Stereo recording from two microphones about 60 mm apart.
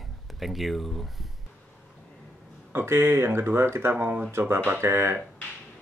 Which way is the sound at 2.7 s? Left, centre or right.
Right.